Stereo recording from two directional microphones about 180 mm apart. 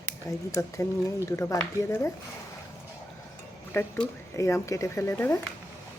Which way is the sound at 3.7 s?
15° left (ahead or behind).